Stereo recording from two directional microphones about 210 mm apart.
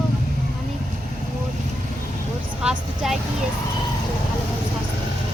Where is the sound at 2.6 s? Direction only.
5° right (ahead or behind).